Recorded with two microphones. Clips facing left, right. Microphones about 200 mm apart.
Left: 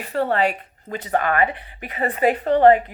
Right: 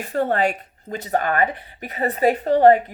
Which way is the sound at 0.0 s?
45° right (ahead or behind).